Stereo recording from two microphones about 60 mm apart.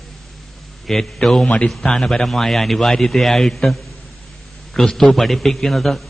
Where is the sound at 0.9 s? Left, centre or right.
Centre.